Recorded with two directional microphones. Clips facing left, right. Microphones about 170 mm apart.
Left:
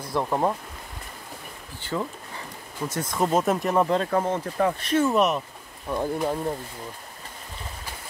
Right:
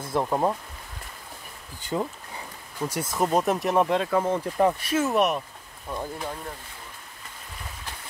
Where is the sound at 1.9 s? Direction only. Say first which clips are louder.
Right 1 dB; 25° right (ahead or behind).